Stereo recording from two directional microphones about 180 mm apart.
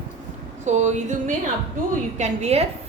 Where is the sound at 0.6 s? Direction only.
40° right (ahead or behind).